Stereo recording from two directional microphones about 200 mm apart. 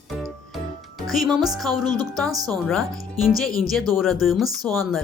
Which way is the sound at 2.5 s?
Centre (ahead or behind).